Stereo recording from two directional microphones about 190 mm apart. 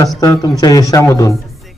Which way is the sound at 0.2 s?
20° left (ahead or behind).